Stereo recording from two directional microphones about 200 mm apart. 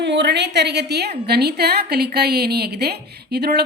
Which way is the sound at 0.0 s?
60° right (ahead or behind).